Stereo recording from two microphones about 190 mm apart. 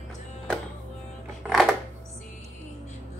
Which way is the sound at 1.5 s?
Centre (ahead or behind).